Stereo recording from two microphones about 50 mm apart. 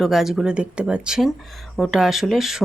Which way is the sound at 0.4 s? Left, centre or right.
Right.